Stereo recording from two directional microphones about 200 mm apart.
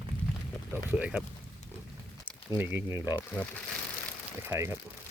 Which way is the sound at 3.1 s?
10° left (ahead or behind).